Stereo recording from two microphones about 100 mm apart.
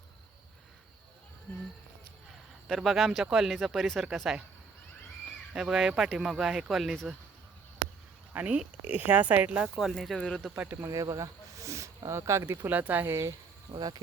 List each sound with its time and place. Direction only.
2.6 s speech: centre (ahead or behind)
5.5 s speech: 5° right (ahead or behind)
8.3 s speech: 15° right (ahead or behind); by 10.5 s 5° left (ahead or behind)
10.5 s speech: 15° right (ahead or behind)
10.8 s speech: 35° right (ahead or behind); by 13.1 s 15° right (ahead or behind)
13.7 s cricket: 50° right (ahead or behind)